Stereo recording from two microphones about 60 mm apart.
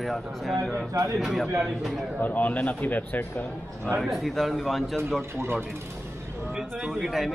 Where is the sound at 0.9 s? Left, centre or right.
Right.